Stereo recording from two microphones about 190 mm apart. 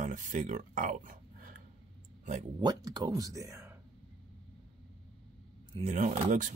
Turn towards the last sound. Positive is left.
turn(degrees=-45)  # may be behind; listen again after turning